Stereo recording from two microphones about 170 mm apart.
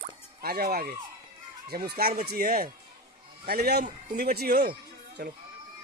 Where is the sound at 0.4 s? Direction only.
65° right (ahead or behind).